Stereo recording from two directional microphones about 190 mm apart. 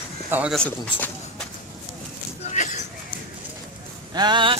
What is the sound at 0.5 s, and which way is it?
Speech, 5° left (ahead or behind).